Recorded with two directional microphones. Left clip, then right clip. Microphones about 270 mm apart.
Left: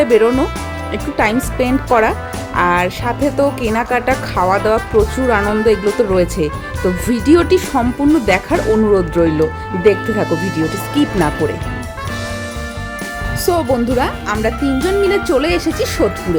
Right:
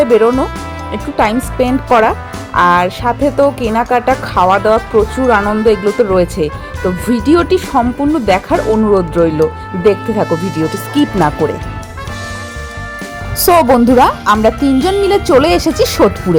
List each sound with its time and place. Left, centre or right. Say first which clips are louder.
0.0 s a woman's voice: right 2 dB; centre
13.4 s speech: right 8 dB; centre